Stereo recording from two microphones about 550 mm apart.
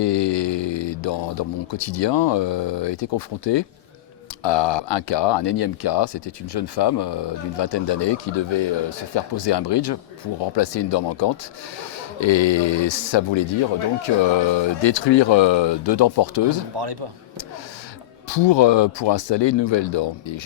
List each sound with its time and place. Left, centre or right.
0.0 s speech: left
16.7 s speech: right
18.3 s speech: left